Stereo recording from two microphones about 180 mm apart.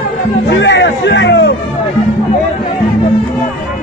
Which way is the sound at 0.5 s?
75° left (ahead or behind).